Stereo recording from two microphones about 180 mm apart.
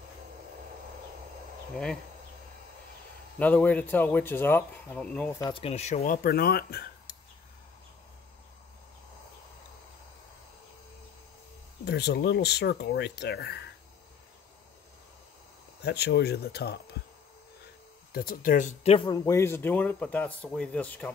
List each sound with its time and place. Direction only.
3.3 s speech: 10° left (ahead or behind)
5.4 s speech: 30° left (ahead or behind)
6.0 s speech: 55° left (ahead or behind)
11.8 s speech: 65° left (ahead or behind)
15.8 s speech: 65° left (ahead or behind)
18.1 s speech: 50° left (ahead or behind); by 19.0 s 35° left (ahead or behind)
19.0 s speech: 20° left (ahead or behind)